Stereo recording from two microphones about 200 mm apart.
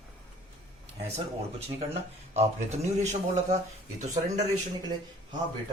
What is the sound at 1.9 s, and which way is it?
Speech, 35° right (ahead or behind).